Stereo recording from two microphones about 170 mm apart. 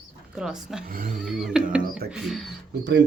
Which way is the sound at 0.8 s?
55° right (ahead or behind).